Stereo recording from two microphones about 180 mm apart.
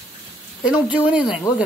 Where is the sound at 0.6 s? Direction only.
5° right (ahead or behind).